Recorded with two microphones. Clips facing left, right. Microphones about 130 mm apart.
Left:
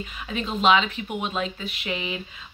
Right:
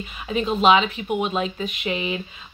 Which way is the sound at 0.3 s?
10° right (ahead or behind).